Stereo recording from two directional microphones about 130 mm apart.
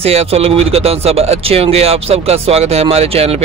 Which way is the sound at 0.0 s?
50° right (ahead or behind).